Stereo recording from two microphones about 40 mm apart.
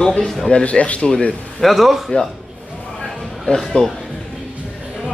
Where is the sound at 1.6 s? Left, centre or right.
Centre.